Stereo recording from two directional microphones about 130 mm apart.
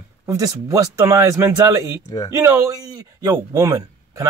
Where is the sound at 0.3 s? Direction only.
25° right (ahead or behind).